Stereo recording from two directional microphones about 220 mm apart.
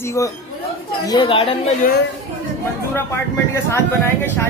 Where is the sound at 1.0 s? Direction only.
20° left (ahead or behind).